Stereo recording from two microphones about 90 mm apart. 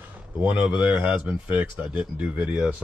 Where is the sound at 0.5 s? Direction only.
15° right (ahead or behind).